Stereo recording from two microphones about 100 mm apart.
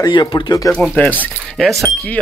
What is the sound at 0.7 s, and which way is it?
Speech, 15° left (ahead or behind).